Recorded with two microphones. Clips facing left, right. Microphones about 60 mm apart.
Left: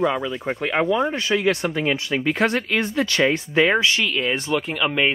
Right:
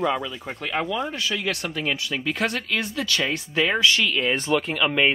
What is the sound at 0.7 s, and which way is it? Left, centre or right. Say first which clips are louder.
Speech: left 6 dB; left.